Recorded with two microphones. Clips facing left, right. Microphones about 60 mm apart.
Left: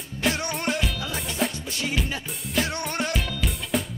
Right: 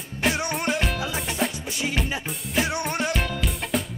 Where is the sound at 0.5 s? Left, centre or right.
Centre.